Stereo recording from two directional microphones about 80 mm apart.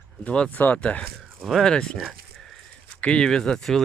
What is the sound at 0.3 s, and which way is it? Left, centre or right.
Speech, centre.